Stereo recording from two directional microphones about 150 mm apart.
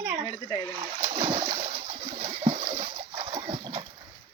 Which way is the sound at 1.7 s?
60° right (ahead or behind).